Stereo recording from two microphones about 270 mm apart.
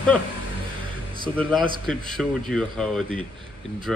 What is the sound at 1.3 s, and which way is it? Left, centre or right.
Speech, centre.